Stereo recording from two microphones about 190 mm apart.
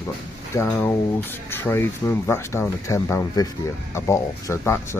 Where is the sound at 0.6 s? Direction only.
15° left (ahead or behind).